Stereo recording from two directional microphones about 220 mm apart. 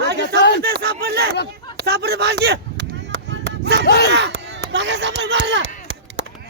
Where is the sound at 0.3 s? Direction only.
50° left (ahead or behind).